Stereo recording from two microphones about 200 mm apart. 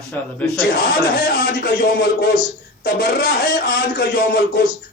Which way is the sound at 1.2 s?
55° left (ahead or behind).